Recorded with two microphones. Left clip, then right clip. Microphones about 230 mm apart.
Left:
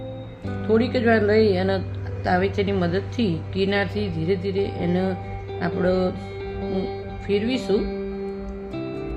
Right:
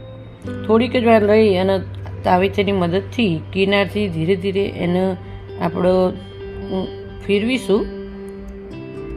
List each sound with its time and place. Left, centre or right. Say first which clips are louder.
0.7 s a woman's voice: right 6 dB; centre
7.3 s a woman's voice: right 5 dB; centre